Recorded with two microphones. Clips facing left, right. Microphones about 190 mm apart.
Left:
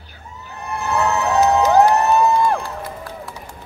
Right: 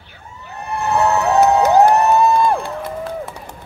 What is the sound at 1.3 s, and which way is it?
Cheering, 55° right (ahead or behind).